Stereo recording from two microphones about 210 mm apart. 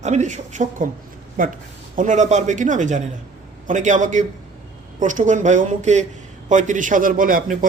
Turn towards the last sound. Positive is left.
turn(degrees=-40)  # may be behind; listen again after turning